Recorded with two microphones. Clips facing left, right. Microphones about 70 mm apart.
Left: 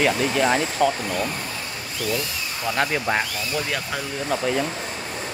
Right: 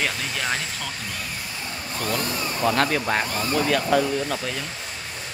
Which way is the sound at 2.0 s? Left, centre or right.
Right.